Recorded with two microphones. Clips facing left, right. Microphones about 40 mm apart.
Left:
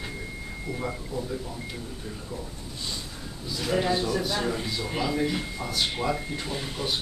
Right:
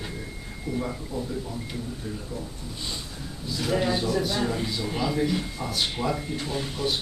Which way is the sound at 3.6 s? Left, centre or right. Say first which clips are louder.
Even; centre.